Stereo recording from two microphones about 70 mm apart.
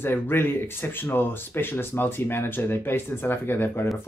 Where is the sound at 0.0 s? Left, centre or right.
Left.